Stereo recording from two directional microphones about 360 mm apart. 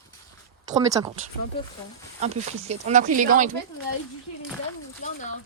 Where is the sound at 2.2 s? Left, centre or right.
Centre.